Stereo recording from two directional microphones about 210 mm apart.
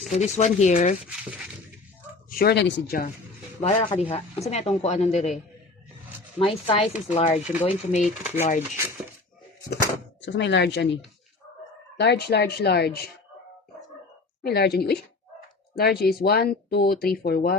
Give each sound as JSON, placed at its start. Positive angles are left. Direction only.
{"t": 0.1, "sound": "a woman's voice", "side_deg": 30}
{"t": 2.3, "sound": "speech", "side_deg": 50}
{"t": 3.6, "sound": "a woman's voice", "side_deg": 30}
{"t": 6.4, "sound": "a woman's voice", "side_deg": 25}
{"t": 9.6, "sound": "speech", "side_deg": 55}
{"t": 11.9, "sound": "speech", "side_deg": 50}
{"t": 14.4, "sound": "speech", "side_deg": 50}